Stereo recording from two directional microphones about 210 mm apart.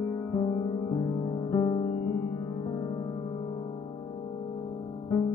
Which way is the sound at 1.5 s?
25° left (ahead or behind).